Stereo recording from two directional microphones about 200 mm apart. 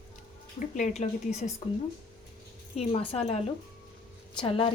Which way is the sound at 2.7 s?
30° left (ahead or behind).